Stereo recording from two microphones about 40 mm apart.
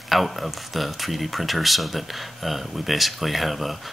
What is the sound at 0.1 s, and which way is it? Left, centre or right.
Speech, centre.